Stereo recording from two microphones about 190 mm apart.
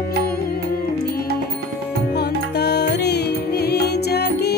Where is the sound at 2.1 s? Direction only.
60° left (ahead or behind).